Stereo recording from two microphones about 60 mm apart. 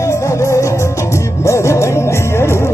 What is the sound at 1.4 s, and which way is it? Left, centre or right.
Music, left.